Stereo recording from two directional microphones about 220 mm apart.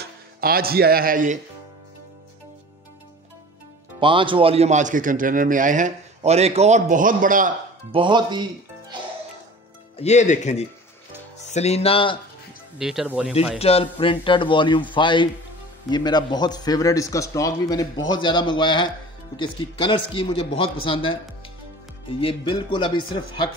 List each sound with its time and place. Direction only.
0.4 s a man's voice: 40° right (ahead or behind)
4.0 s a man's voice: 20° right (ahead or behind)
7.9 s speech: 20° right (ahead or behind)
9.9 s a man's voice: 30° left (ahead or behind)
12.7 s speech: centre (ahead or behind)
13.6 s a man's voice: 25° left (ahead or behind)
22.2 s a man's voice: 25° left (ahead or behind)